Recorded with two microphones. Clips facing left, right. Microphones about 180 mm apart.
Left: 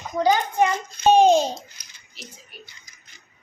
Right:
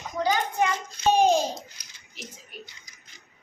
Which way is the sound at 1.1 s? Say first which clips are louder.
Left 5 dB; 25° left (ahead or behind).